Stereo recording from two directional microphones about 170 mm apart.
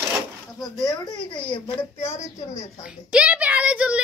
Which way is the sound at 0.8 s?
20° left (ahead or behind).